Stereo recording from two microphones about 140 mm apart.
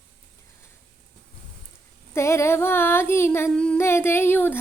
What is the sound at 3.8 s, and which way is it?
Speech, 20° left (ahead or behind).